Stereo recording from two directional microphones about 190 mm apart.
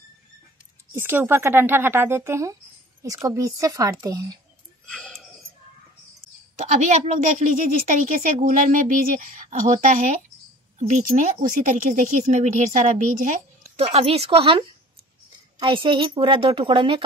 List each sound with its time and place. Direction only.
0.9 s a woman's voice: 10° right (ahead or behind)
4.8 s a sound: 5° left (ahead or behind)
6.6 s a woman's voice: 40° right (ahead or behind)
13.7 s a woman's voice: 30° right (ahead or behind)
15.6 s a woman's voice: 25° right (ahead or behind)